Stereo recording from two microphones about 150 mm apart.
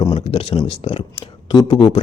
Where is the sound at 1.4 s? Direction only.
30° left (ahead or behind).